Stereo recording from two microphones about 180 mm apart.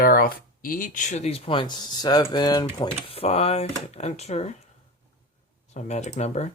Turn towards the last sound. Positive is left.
turn(degrees=40)  # may be behind; listen again after turning